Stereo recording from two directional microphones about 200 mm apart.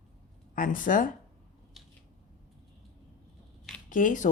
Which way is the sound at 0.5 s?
40° left (ahead or behind).